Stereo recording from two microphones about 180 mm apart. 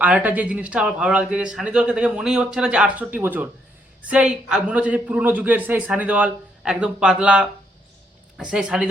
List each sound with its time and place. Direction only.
0.0 s speech: 10° right (ahead or behind)